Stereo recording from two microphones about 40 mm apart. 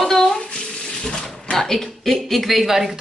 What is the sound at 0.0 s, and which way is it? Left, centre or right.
Bathtub, centre.